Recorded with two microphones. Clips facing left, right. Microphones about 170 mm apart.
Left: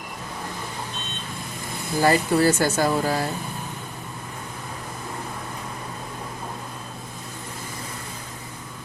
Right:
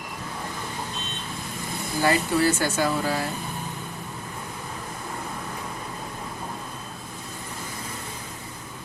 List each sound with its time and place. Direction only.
2.0 s speech: 40° left (ahead or behind)